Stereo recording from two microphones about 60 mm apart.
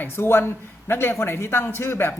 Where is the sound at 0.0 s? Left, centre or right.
Left.